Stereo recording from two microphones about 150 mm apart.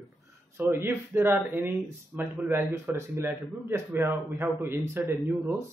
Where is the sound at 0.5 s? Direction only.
15° right (ahead or behind).